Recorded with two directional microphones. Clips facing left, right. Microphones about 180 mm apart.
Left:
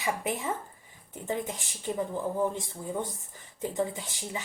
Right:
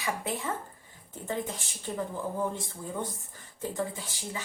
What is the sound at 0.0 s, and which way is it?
Speech, 20° left (ahead or behind).